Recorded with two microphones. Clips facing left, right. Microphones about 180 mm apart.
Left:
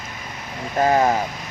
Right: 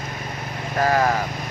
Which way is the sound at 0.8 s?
20° left (ahead or behind).